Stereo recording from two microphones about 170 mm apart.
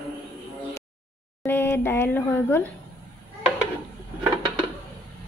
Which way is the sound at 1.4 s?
15° left (ahead or behind).